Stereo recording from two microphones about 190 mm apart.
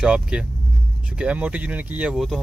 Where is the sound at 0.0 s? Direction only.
5° right (ahead or behind).